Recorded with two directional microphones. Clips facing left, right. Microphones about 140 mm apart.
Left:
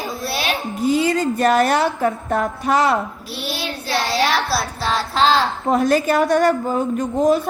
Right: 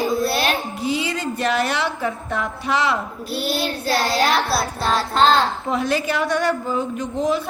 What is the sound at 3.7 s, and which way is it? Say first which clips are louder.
Child singing: right 2 dB; 45° right (ahead or behind).